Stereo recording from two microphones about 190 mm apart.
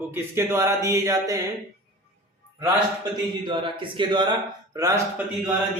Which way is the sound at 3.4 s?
25° right (ahead or behind).